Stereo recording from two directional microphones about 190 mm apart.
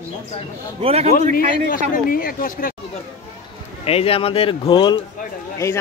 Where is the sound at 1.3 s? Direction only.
50° left (ahead or behind).